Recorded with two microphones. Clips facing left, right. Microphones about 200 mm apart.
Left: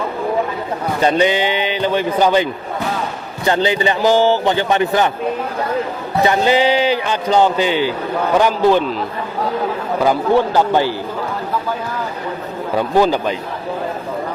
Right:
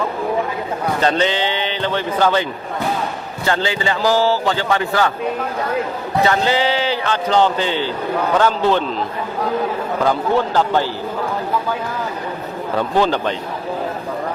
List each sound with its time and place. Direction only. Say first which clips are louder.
1.0 s a man's voice: left 4 dB; 10° left (ahead or behind)
6.2 s a man's voice: left 4 dB; 15° left (ahead or behind)
10.0 s a man's voice: left 3 dB; 10° left (ahead or behind)
12.7 s a man's voice: left 3 dB; 10° left (ahead or behind)